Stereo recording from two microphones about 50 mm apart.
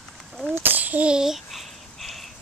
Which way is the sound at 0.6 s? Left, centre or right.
Right.